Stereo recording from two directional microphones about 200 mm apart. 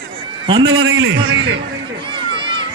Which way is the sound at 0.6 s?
75° right (ahead or behind).